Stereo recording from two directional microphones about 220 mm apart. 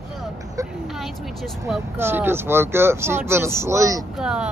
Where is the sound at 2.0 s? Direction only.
10° right (ahead or behind).